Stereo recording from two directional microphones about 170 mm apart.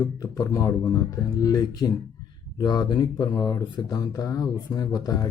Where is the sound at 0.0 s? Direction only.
20° left (ahead or behind).